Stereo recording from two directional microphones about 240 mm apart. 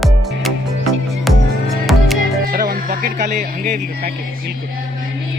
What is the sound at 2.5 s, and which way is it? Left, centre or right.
Speech, right.